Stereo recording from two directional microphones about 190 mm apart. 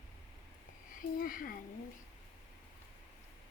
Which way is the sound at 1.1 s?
50° left (ahead or behind).